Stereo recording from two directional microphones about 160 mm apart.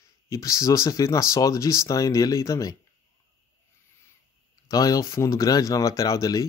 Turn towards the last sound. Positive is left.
turn(degrees=20)  # may be behind; listen again after turning